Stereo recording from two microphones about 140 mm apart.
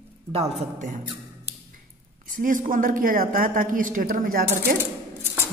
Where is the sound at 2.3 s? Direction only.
75° right (ahead or behind).